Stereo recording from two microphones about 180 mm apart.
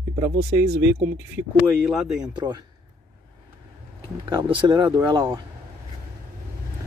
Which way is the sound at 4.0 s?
25° right (ahead or behind).